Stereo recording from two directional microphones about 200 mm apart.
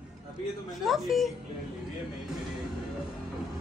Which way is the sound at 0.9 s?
Centre (ahead or behind).